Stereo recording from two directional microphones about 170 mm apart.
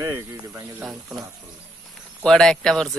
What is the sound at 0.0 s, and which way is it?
Speech, 15° right (ahead or behind).